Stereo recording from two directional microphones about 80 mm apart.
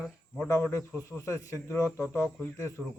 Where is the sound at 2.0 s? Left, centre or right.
Right.